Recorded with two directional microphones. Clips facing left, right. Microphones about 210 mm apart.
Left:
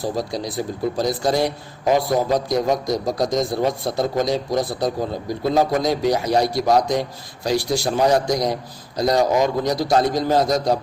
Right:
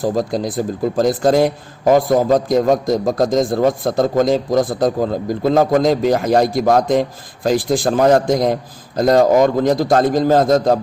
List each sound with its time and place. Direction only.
0.0 s a man's voice: 50° right (ahead or behind)